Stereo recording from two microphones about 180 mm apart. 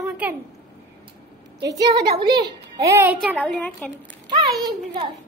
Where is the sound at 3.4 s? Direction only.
5° left (ahead or behind).